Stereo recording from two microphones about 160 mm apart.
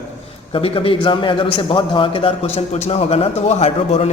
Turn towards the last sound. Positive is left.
turn(degrees=40)  # may be behind; listen again after turning